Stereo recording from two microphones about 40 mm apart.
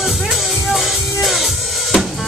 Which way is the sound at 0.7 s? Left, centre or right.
Centre.